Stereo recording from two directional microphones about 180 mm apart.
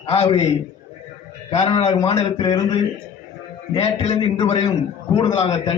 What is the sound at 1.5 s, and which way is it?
A man's voice, 30° left (ahead or behind).